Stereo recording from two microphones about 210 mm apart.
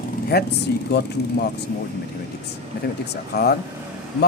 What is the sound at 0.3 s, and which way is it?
Speech, 50° left (ahead or behind).